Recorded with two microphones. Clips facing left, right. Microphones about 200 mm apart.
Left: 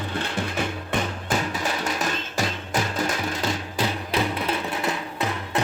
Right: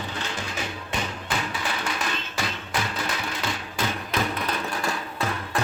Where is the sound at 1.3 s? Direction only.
40° left (ahead or behind).